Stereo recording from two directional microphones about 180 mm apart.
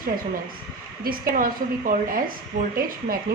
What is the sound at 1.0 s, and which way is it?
A woman's voice, 50° right (ahead or behind).